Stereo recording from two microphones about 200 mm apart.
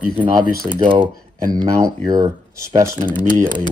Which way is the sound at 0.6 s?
40° right (ahead or behind).